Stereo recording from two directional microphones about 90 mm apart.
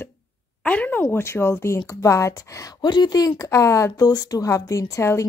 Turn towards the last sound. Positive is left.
turn(degrees=35)  # may be behind; listen again after turning